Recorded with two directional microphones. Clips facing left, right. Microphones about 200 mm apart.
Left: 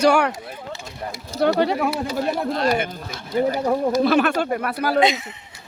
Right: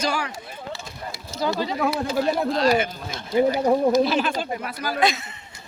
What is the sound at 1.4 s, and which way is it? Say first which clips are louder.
Speech: left 6 dB; 65° left (ahead or behind).